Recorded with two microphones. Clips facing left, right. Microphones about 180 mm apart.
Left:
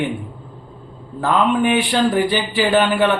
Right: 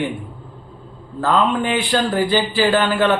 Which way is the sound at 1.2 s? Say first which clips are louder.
Left 1 dB; 15° left (ahead or behind).